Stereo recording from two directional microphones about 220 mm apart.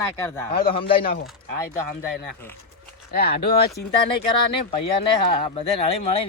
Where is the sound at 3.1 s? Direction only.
45° left (ahead or behind).